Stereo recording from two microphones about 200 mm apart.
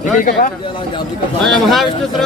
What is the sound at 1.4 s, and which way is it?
Speech, centre (ahead or behind).